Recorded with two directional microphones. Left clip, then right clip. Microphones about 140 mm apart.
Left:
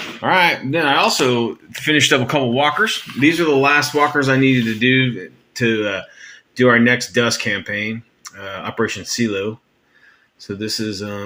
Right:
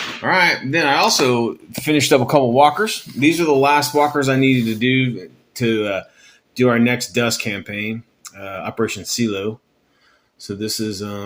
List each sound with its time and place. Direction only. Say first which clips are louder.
0.2 s speech: left 1 dB; 10° left (ahead or behind)
0.7 s speech: even; 5° right (ahead or behind)
2.7 s speech: left 3 dB; 5° right (ahead or behind)